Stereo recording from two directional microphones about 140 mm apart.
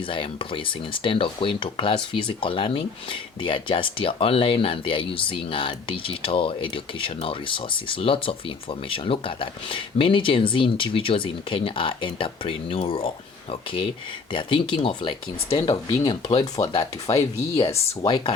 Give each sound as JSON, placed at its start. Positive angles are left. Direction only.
{"t": 0.1, "sound": "speech", "side_deg": 40}